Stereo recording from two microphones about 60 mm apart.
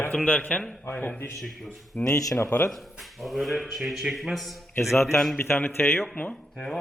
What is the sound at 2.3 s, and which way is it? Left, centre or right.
Speech, left.